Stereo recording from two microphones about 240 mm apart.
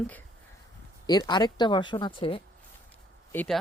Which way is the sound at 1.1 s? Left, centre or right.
Centre.